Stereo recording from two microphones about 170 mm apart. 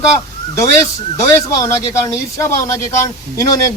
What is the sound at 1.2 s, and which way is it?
A man's voice, 20° left (ahead or behind).